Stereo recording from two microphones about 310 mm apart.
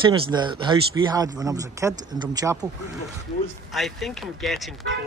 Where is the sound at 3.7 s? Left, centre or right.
Centre.